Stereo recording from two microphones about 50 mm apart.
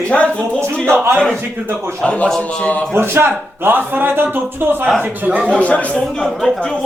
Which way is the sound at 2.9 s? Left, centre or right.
Right.